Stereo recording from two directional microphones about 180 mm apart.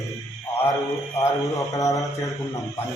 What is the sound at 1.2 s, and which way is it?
Mantra, 20° left (ahead or behind).